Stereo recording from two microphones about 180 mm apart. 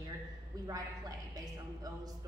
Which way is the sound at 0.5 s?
20° right (ahead or behind).